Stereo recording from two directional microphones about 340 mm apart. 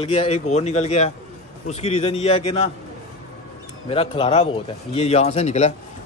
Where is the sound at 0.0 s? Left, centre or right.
Centre.